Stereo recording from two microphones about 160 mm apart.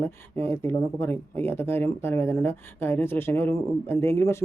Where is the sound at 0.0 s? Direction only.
15° left (ahead or behind).